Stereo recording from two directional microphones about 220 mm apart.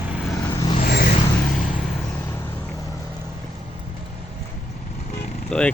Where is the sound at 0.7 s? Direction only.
40° left (ahead or behind).